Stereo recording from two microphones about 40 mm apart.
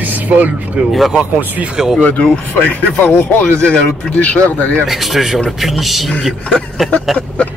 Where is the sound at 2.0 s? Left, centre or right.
Left.